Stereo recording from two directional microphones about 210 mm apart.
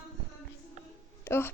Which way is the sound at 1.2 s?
10° left (ahead or behind).